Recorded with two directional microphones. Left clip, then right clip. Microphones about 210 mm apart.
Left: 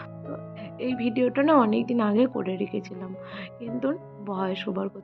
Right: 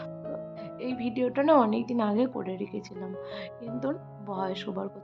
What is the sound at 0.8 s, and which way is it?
Speech, 10° left (ahead or behind).